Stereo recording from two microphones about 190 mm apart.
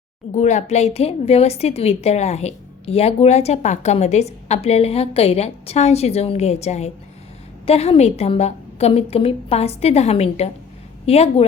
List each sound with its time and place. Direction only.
0.3 s a woman's voice: 35° left (ahead or behind)